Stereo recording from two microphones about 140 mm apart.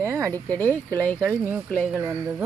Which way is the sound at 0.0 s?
20° right (ahead or behind).